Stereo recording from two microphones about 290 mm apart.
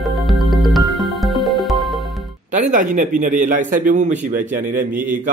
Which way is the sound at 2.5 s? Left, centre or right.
Right.